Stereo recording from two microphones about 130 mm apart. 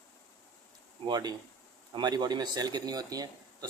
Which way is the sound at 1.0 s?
30° right (ahead or behind).